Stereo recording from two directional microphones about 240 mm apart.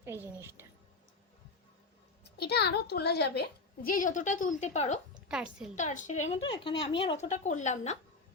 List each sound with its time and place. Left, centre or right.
0.0 s a woman's voice: centre
2.2 s a woman's voice: left
5.3 s a woman's voice: centre
5.7 s a woman's voice: left